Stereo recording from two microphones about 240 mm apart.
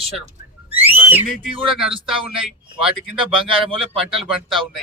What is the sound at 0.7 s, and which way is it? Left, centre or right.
Whistling, centre.